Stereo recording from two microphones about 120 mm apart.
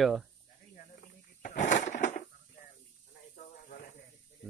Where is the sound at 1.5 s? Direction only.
80° left.